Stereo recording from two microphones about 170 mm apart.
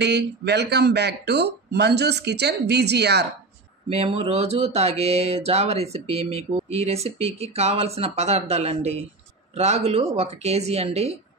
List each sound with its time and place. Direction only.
0.0 s speech: 80° right
3.9 s speech: 35° right (ahead or behind)